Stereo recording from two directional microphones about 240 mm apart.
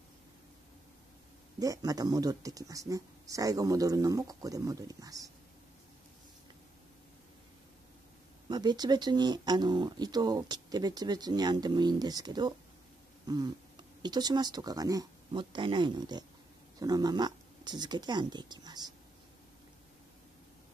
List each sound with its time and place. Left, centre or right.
1.6 s speech: centre
8.5 s speech: centre